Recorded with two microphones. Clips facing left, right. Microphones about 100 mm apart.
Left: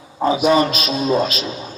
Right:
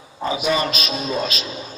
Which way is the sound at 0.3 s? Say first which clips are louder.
Left 6 dB; 35° left (ahead or behind).